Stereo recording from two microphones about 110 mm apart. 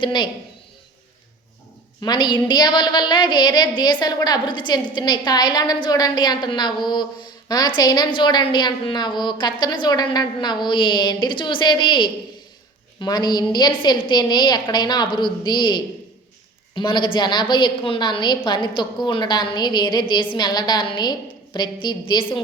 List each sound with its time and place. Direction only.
0.0 s a woman's voice: 45° left (ahead or behind)
2.0 s a woman's voice: 40° left (ahead or behind)